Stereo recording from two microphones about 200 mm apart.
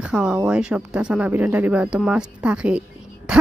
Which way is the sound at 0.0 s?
5° right (ahead or behind).